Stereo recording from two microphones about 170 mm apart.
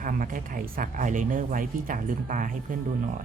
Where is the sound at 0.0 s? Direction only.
55° right (ahead or behind).